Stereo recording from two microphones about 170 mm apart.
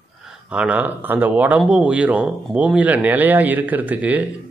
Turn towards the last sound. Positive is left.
turn(degrees=-10)  # may be behind; listen again after turning